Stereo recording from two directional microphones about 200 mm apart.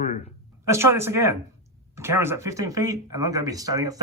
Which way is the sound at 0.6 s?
15° right (ahead or behind).